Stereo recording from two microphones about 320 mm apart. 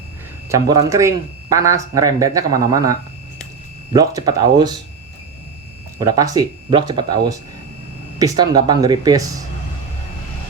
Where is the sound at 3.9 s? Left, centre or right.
Centre.